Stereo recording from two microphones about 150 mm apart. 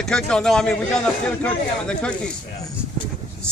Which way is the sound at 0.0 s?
5° left (ahead or behind).